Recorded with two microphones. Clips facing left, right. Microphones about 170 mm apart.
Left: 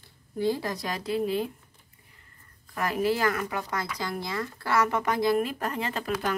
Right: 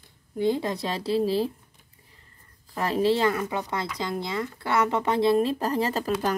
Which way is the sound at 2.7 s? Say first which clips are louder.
Right 3 dB; 30° right (ahead or behind).